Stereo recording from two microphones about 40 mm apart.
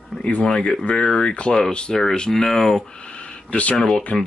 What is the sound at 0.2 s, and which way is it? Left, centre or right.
Speech, left.